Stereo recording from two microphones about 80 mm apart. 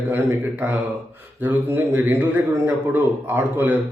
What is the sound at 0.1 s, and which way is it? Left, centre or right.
A man's voice, right.